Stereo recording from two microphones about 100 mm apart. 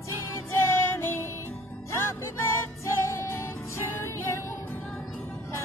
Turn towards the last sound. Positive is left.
turn(degrees=25)  # may be behind; listen again after turning